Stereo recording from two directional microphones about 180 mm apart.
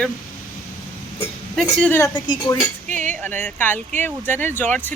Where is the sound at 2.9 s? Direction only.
45° right (ahead or behind).